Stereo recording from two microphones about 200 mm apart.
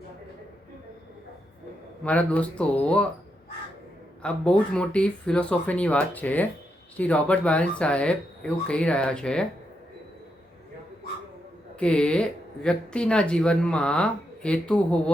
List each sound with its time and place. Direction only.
2.0 s speech: 5° left (ahead or behind)
4.2 s speech: 5° left (ahead or behind)
11.8 s speech: 5° left (ahead or behind)